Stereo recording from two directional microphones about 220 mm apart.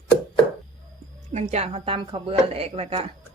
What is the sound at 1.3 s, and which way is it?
Speech, 30° right (ahead or behind).